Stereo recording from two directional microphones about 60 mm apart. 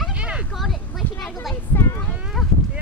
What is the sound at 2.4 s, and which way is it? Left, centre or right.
Livestock, centre.